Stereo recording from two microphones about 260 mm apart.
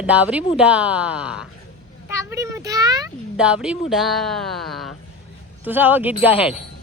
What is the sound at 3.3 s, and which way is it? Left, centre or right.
Speech, centre.